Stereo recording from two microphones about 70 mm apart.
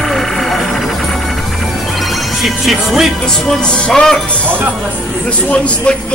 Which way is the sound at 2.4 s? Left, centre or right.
Centre.